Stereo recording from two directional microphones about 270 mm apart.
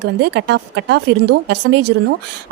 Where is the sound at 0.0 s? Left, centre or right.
Right.